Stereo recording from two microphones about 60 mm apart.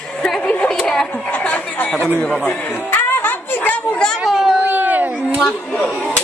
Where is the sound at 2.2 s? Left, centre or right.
Centre.